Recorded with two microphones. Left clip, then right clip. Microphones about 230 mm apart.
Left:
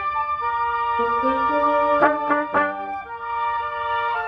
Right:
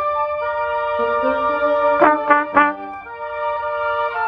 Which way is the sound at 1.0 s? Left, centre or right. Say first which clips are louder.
Right 2 dB; centre.